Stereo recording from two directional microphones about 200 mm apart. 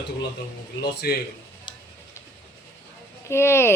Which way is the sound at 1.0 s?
50° left (ahead or behind).